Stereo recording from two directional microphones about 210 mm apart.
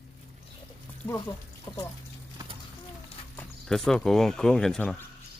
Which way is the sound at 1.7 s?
20° left (ahead or behind).